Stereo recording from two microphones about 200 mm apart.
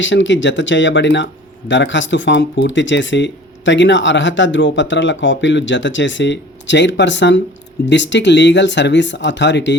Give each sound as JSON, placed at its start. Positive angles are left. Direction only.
{"t": 0.0, "sound": "speech", "side_deg": 65}